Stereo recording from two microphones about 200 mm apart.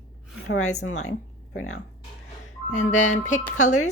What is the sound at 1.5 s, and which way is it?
Speech, 90° left.